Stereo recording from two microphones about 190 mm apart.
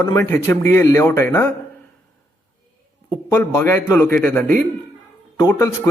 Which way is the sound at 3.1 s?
15° left (ahead or behind).